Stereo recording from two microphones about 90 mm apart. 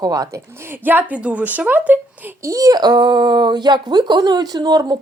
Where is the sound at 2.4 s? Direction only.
40° right (ahead or behind).